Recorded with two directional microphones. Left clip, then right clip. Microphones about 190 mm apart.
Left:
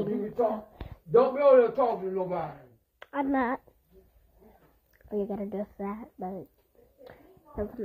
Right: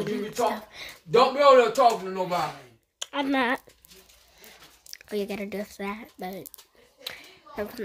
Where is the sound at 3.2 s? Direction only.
20° right (ahead or behind).